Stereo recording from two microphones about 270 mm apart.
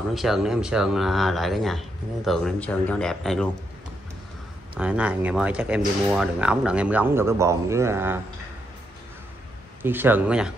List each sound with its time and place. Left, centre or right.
0.1 s speech: centre
4.7 s speech: centre
9.8 s speech: centre